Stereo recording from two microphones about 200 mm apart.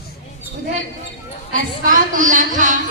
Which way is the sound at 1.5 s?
40° right (ahead or behind).